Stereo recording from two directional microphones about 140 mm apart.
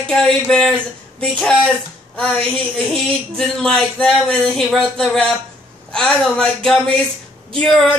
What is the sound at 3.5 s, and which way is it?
A man's voice, 5° left (ahead or behind).